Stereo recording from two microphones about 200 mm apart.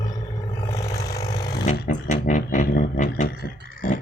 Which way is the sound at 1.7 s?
40° left (ahead or behind).